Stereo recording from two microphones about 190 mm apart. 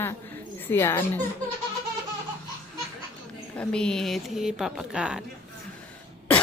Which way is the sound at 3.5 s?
5° left (ahead or behind).